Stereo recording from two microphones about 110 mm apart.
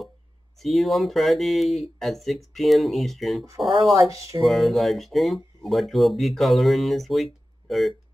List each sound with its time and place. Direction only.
0.6 s speech: centre (ahead or behind)
3.9 s speech: 30° right (ahead or behind)
4.4 s speech: centre (ahead or behind)